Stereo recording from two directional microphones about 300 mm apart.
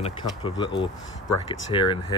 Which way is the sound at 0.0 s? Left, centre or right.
Centre.